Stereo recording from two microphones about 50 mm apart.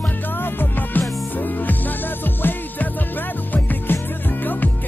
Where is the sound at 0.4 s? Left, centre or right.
Left.